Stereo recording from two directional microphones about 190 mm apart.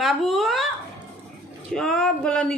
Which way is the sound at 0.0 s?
Centre (ahead or behind).